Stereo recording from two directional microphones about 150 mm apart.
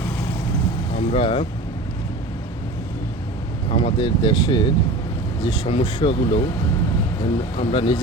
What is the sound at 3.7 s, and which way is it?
Speech, 40° left (ahead or behind).